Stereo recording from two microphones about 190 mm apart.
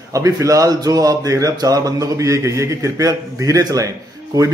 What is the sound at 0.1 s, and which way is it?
Speech, 15° right (ahead or behind).